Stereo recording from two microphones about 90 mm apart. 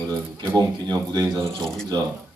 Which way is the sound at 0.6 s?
50° right (ahead or behind).